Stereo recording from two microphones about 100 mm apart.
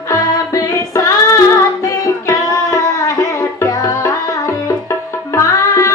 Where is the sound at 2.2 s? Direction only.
35° left (ahead or behind).